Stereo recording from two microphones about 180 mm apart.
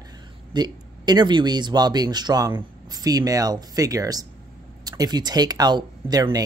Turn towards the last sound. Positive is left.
turn(degrees=-20)  # may be behind; listen again after turning